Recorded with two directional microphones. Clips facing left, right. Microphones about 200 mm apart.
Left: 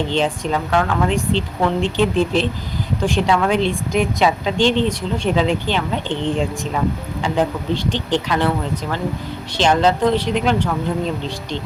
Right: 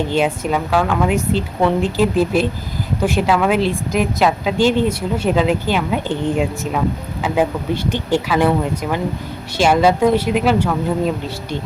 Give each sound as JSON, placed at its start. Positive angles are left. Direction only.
{"t": 0.1, "sound": "a woman's voice", "side_deg": -10}